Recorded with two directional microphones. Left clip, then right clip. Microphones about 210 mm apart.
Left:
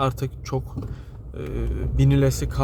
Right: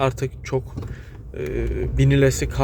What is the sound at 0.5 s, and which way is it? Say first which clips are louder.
A man's voice: right 4 dB; 10° left (ahead or behind).